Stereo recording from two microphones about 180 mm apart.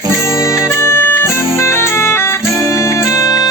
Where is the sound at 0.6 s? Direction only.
15° left (ahead or behind).